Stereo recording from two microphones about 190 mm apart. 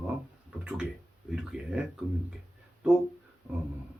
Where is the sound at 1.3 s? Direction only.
5° right (ahead or behind).